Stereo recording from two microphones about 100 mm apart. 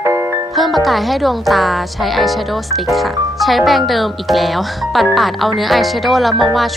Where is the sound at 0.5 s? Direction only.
Centre (ahead or behind).